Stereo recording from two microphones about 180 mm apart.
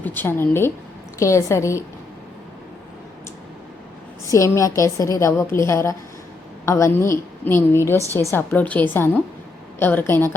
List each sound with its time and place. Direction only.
0.0 s a woman's voice: 10° left (ahead or behind)
4.3 s a woman's voice: 15° left (ahead or behind)